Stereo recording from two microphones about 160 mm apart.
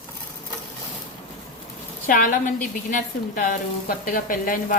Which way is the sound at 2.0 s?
55° left (ahead or behind).